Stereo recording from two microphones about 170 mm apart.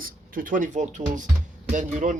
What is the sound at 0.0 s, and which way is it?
Speech, 55° right (ahead or behind).